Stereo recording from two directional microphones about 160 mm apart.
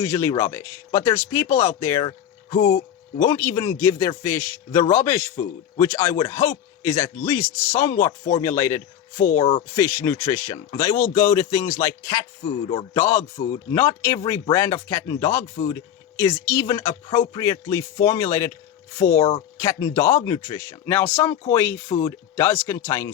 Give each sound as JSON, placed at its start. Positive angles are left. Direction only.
{"t": 0.0, "sound": "a man's voice", "side_deg": 20}
{"t": 15.5, "sound": "speech", "side_deg": 35}
{"t": 16.1, "sound": "speech", "side_deg": 15}
{"t": 19.5, "sound": "a man's voice", "side_deg": 15}